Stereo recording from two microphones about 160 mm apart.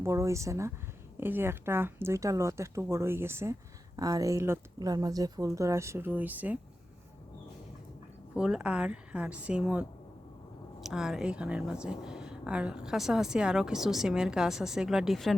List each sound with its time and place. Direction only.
0.0 s speech: 20° right (ahead or behind)
8.4 s speech: 5° right (ahead or behind)